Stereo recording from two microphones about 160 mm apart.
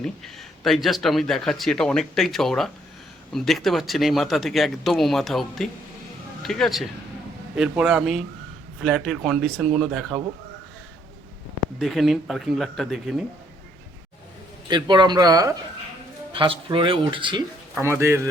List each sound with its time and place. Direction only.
0.0 s speech: centre (ahead or behind)
11.8 s speech: centre (ahead or behind)
14.7 s speech: 30° right (ahead or behind)
17.7 s speech: 15° right (ahead or behind)